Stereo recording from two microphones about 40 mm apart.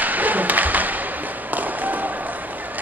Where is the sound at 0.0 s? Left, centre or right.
Right.